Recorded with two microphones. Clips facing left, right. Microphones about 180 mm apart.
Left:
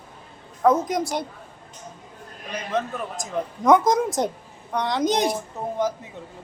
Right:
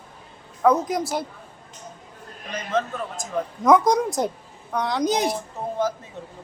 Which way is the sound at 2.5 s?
15° left (ahead or behind).